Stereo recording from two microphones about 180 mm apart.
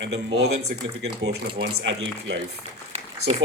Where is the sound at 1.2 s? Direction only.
80° right.